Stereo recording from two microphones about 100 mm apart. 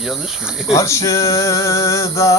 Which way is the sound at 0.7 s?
30° left (ahead or behind).